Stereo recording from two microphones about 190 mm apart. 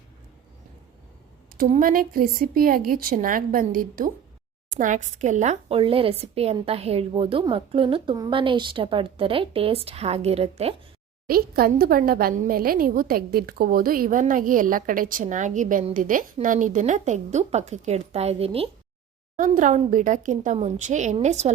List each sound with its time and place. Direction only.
1.5 s a woman's voice: 45° right (ahead or behind)
11.3 s a woman's voice: 50° right (ahead or behind); by 18.7 s 30° right (ahead or behind)
19.4 s a woman's voice: 40° right (ahead or behind)